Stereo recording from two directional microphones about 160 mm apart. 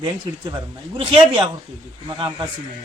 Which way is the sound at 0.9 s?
30° right (ahead or behind).